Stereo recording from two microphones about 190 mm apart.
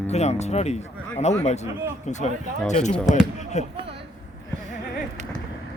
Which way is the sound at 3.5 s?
35° left (ahead or behind).